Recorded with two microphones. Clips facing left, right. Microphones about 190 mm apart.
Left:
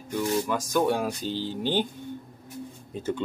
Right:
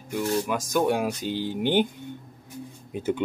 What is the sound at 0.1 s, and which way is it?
Speech, 10° right (ahead or behind).